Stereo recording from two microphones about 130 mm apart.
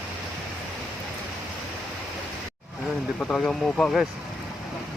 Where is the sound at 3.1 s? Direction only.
10° left (ahead or behind).